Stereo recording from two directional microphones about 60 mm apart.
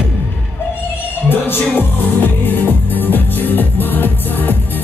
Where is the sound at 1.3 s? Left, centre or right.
Left.